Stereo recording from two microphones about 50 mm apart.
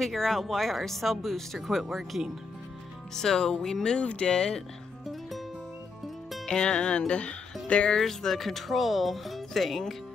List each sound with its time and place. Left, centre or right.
0.0 s speech: centre
3.2 s speech: centre
6.4 s speech: centre
7.9 s speech: centre